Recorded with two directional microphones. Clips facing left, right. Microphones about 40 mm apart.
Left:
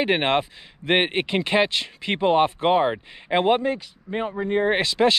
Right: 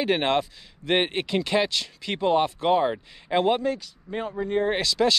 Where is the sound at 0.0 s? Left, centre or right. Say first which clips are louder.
Left 2 dB; left.